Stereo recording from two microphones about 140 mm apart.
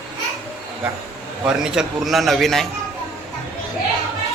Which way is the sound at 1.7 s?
5° right (ahead or behind).